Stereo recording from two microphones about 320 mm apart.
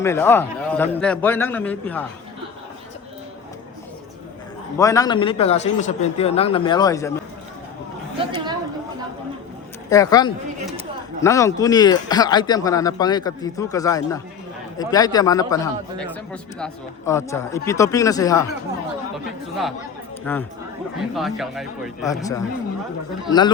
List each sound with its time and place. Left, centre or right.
0.0 s a man's voice: centre
4.8 s speech: centre
8.2 s chatter: centre
9.9 s speech: centre
20.3 s a man's voice: centre
22.0 s speech: centre